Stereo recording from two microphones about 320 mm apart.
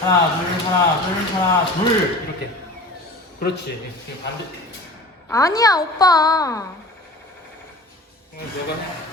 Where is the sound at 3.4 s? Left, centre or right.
Left.